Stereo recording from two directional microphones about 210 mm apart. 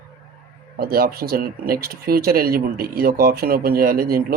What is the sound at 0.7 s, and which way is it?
Speech, 45° right (ahead or behind).